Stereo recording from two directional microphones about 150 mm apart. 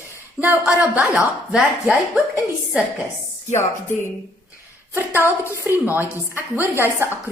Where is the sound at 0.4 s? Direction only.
10° right (ahead or behind).